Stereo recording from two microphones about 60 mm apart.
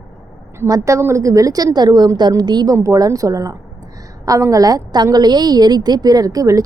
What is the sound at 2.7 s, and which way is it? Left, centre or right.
Speech, right.